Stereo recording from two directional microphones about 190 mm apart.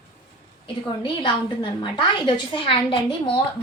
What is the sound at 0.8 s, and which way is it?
A woman's voice, 25° left (ahead or behind).